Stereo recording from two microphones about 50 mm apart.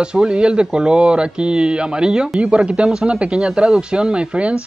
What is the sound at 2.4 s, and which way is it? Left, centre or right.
Speech, right.